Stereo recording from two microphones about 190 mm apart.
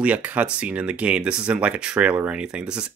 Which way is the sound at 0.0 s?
10° right (ahead or behind).